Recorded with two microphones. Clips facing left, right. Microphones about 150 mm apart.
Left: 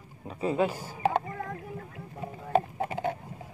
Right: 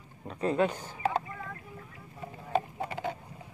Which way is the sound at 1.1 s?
70° left (ahead or behind).